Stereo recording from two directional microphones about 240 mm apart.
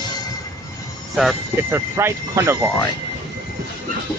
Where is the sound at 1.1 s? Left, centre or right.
Centre.